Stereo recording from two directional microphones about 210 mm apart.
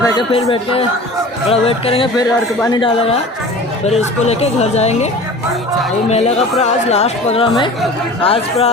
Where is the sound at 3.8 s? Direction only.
30° left (ahead or behind).